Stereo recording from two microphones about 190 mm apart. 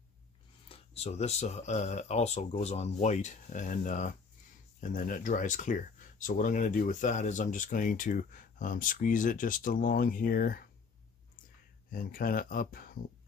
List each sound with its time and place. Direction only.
0.7 s speech: 35° left (ahead or behind); by 10.6 s 50° left (ahead or behind)
11.9 s speech: 50° left (ahead or behind)